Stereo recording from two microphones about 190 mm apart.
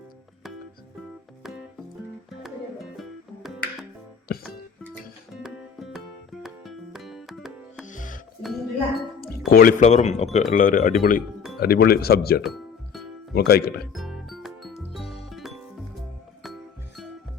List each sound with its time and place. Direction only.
2.4 s music: centre (ahead or behind)
4.3 s music: 55° left (ahead or behind)
5.3 s music: centre (ahead or behind)
7.9 s music: 40° left (ahead or behind)
8.4 s music: centre (ahead or behind)
9.5 s speech: 50° left (ahead or behind)
12.4 s music: centre (ahead or behind)
13.3 s speech: 55° left (ahead or behind)
13.9 s music: centre (ahead or behind)